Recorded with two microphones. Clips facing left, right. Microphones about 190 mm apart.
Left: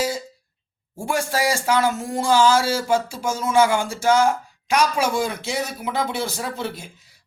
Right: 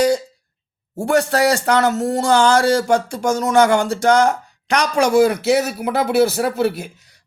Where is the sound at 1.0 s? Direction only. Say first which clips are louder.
Right 7 dB; 70° right (ahead or behind).